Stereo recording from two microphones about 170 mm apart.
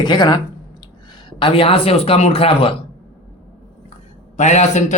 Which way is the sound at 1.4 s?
30° left (ahead or behind).